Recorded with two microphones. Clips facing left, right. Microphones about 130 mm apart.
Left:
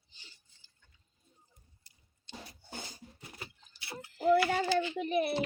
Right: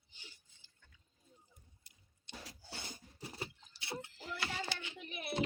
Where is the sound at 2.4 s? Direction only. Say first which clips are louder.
Left 2 dB; 90° right.